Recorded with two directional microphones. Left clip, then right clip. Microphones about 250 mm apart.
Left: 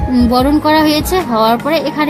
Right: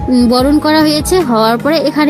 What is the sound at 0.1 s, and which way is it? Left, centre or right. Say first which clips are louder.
Speech: right 2 dB; centre.